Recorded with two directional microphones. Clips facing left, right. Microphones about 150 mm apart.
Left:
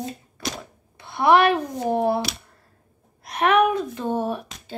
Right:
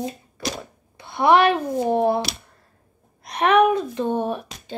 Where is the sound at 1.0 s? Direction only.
Centre (ahead or behind).